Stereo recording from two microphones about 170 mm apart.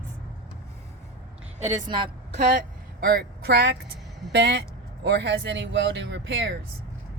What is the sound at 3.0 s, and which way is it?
Speech, 65° right (ahead or behind).